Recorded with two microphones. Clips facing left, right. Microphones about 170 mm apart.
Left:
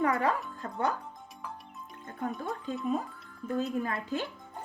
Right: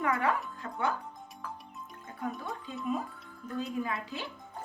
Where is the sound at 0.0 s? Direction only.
35° left (ahead or behind).